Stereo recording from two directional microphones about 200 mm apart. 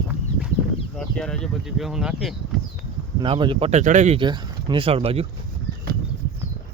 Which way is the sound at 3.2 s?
25° right (ahead or behind).